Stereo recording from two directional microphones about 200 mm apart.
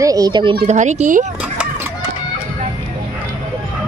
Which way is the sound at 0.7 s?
35° right (ahead or behind).